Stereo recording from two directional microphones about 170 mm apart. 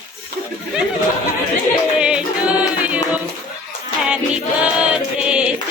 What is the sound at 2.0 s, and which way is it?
Music, 5° right (ahead or behind).